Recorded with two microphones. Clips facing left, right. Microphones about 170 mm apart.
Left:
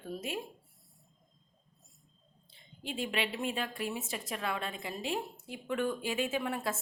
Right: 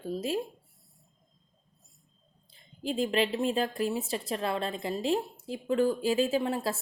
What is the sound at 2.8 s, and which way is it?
A woman's voice, 35° right (ahead or behind).